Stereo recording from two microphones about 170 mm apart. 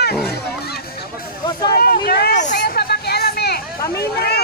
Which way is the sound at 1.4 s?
25° left (ahead or behind).